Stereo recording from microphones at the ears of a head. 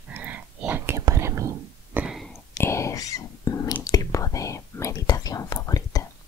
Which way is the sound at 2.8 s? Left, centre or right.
Left.